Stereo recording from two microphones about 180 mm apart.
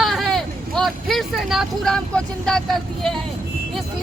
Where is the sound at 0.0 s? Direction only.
Centre (ahead or behind).